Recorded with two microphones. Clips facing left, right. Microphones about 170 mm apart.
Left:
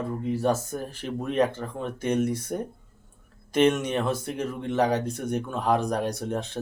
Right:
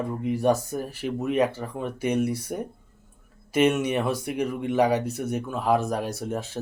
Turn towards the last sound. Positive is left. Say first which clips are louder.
# even
turn(degrees=-5)  # may be behind; listen again after turning